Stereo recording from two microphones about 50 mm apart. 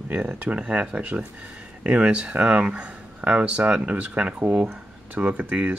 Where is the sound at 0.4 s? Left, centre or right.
Right.